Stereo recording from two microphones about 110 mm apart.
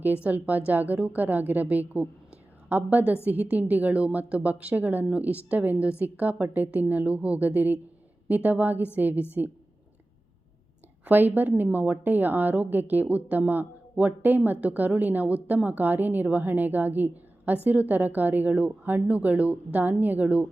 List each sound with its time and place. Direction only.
0.0 s speech: 15° right (ahead or behind)
11.0 s speech: 15° right (ahead or behind)